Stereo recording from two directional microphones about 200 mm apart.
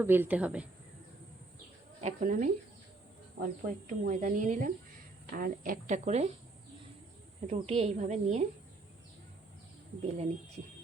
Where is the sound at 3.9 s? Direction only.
40° right (ahead or behind).